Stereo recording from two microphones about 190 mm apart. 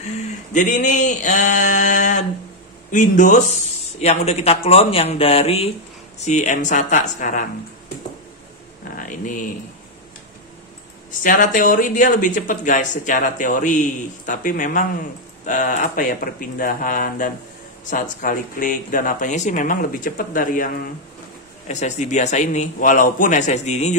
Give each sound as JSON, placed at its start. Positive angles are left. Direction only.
{"t": 0.0, "sound": "a man's voice", "side_deg": 40}
{"t": 8.9, "sound": "a sound", "side_deg": 45}
{"t": 11.2, "sound": "a man's voice", "side_deg": 45}